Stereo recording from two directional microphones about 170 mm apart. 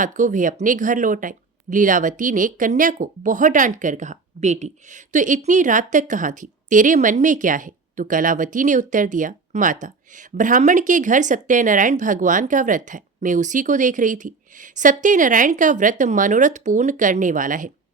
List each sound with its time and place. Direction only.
0.0 s speech: 50° right (ahead or behind)